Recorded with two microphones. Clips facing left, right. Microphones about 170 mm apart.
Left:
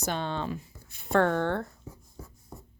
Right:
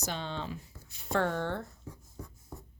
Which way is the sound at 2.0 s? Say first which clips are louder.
Even; centre (ahead or behind).